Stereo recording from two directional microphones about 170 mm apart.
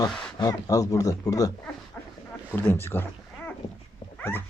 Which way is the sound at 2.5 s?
10° left (ahead or behind).